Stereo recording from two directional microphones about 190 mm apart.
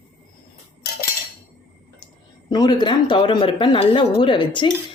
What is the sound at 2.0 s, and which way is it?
Speech, 20° left (ahead or behind).